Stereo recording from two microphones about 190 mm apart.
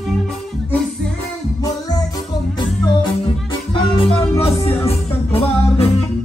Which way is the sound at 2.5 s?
25° left (ahead or behind).